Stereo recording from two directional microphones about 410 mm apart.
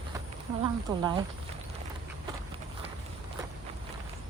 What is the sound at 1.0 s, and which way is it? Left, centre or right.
Speech, centre.